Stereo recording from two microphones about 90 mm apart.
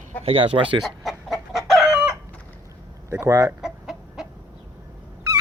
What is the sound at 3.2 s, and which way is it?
Speech, 40° right (ahead or behind).